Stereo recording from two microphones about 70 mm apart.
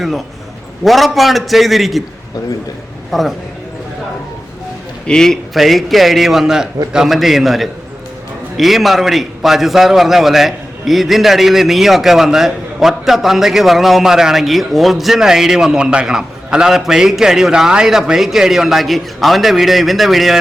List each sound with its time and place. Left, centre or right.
0.0 s a man's voice: centre
3.1 s a man's voice: centre
5.0 s a man's voice: centre